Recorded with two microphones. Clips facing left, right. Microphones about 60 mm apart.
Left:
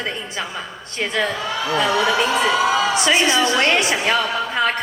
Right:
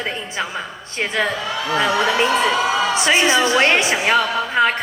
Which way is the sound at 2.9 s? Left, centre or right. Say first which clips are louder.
Right 1 dB; right.